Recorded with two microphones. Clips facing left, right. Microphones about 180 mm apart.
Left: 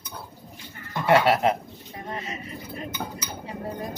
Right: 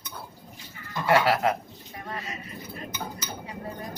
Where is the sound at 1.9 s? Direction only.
25° left (ahead or behind).